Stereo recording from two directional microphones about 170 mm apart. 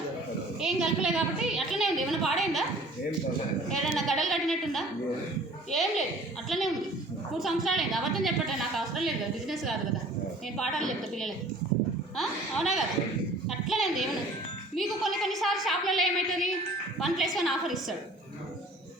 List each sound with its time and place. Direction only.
0.6 s a woman's voice: 5° right (ahead or behind)
3.8 s a woman's voice: centre (ahead or behind)